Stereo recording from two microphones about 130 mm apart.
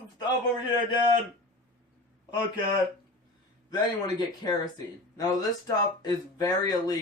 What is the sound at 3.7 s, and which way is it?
A man's voice, 35° left (ahead or behind).